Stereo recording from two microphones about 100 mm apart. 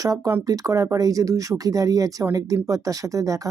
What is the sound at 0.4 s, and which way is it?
Speech, 35° right (ahead or behind).